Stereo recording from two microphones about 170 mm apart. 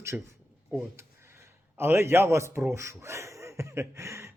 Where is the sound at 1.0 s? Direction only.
15° right (ahead or behind).